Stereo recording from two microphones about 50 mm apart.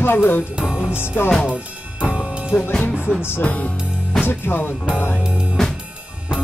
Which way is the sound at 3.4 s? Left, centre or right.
Left.